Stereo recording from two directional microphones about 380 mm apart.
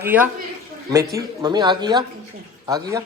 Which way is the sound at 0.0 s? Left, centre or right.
Centre.